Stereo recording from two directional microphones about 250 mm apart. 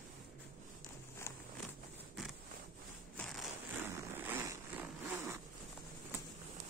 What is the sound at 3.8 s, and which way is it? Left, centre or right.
Zipper, centre.